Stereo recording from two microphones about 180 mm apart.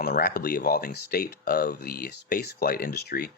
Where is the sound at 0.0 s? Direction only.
60° left (ahead or behind).